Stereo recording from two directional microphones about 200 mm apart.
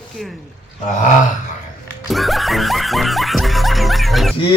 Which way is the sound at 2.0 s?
Centre (ahead or behind).